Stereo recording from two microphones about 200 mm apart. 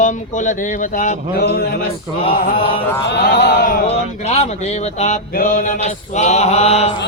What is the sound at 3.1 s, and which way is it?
Speech, 55° left (ahead or behind).